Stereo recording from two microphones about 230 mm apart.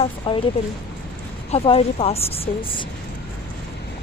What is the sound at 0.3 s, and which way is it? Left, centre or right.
Speech, left.